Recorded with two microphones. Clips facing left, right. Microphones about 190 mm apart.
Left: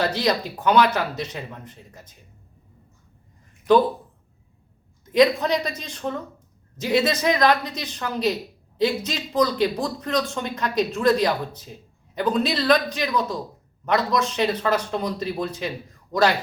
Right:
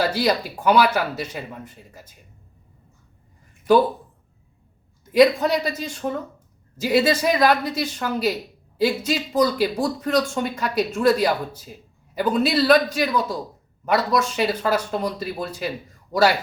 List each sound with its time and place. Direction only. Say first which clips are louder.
0.0 s speech: right 1 dB; 5° right (ahead or behind)
5.1 s speech: right 2 dB; 5° right (ahead or behind)